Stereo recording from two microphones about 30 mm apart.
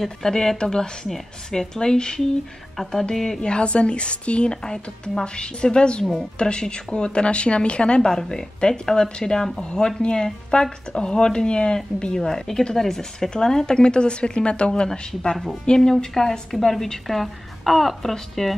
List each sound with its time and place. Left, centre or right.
0.0 s speech: centre
3.3 s speech: left
4.6 s speech: left
8.0 s a woman's voice: left; by 18.5 s centre